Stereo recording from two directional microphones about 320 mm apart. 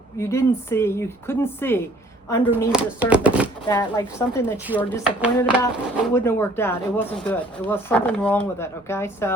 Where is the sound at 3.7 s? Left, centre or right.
Centre.